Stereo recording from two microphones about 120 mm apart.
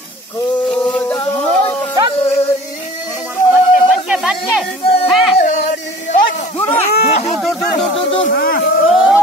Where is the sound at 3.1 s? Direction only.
10° right (ahead or behind).